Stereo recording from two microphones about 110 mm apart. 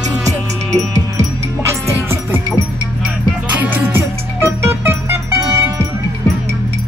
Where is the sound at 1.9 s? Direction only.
20° right (ahead or behind).